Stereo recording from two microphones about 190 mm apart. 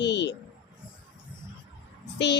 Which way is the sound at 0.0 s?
65° left (ahead or behind).